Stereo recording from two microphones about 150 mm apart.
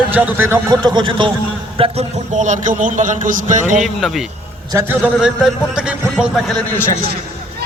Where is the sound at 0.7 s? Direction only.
30° right (ahead or behind).